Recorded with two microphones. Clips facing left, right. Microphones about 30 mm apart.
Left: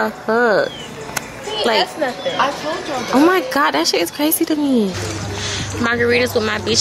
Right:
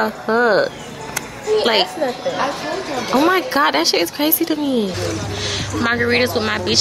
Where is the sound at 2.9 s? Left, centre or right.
Centre.